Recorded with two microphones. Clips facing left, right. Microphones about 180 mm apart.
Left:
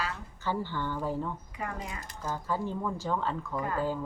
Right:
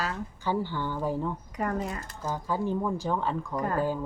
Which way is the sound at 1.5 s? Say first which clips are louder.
Right 11 dB; 45° right (ahead or behind).